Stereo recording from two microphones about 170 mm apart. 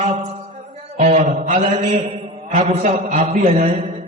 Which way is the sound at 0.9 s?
45° right (ahead or behind).